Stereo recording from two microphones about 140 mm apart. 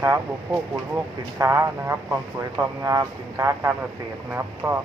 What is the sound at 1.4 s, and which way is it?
Speech, 20° right (ahead or behind).